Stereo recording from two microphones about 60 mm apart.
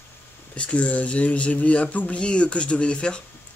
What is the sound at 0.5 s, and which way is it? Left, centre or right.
Speech, left.